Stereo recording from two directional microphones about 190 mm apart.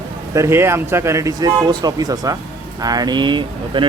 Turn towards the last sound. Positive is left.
turn(degrees=-25)  # may be behind; listen again after turning